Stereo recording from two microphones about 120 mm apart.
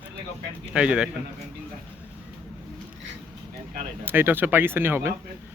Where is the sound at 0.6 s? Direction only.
10° right (ahead or behind).